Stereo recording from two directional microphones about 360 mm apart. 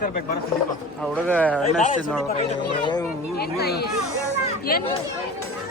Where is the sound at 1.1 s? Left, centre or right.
Centre.